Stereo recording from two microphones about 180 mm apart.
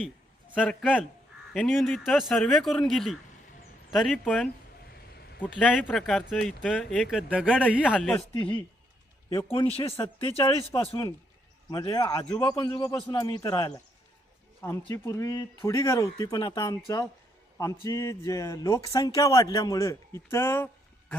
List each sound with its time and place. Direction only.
0.7 s speech: 5° left (ahead or behind)
7.9 s speech: 5° left (ahead or behind)
9.6 s speech: 30° left (ahead or behind); by 20.7 s 15° left (ahead or behind)